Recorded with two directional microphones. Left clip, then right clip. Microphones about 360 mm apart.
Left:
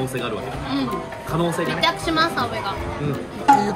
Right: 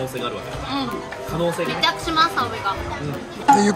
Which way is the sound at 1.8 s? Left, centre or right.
Centre.